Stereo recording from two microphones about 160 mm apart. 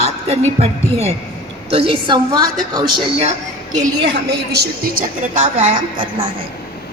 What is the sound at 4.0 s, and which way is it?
A woman's voice, 90° right.